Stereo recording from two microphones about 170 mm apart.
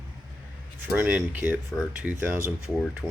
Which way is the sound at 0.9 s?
10° right (ahead or behind).